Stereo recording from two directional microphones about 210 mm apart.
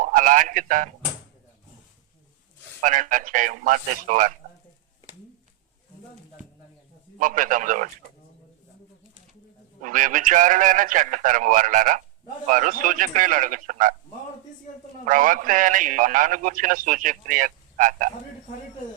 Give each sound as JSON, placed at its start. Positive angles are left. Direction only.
{"t": 0.0, "sound": "a man's voice", "side_deg": -40}
{"t": 2.8, "sound": "a man's voice", "side_deg": -40}
{"t": 7.2, "sound": "a man's voice", "side_deg": -40}
{"t": 9.8, "sound": "a man's voice", "side_deg": -40}
{"t": 15.0, "sound": "a man's voice", "side_deg": -40}